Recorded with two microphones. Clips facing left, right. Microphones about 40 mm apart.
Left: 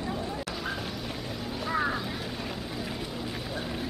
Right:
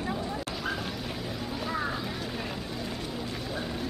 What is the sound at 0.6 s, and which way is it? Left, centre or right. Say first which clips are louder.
Music: right 1 dB; centre.